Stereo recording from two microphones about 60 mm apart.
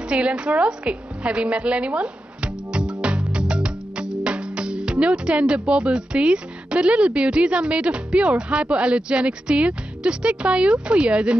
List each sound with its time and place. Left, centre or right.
0.1 s a woman's voice: centre